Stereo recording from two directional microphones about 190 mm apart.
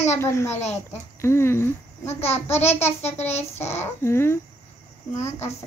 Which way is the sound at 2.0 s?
35° left (ahead or behind).